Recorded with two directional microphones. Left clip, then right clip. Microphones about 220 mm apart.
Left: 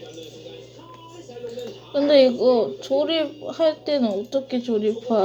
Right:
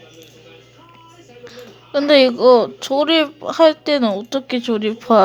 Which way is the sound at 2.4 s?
90° right.